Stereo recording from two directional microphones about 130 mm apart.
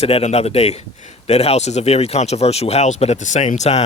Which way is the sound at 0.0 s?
55° left (ahead or behind).